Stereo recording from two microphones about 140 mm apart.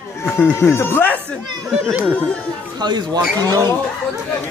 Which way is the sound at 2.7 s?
30° right (ahead or behind).